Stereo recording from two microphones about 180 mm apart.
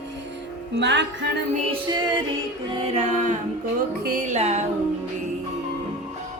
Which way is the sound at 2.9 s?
40° right (ahead or behind).